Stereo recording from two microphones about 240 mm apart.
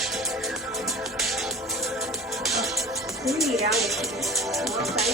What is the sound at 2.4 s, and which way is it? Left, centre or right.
Speech, centre.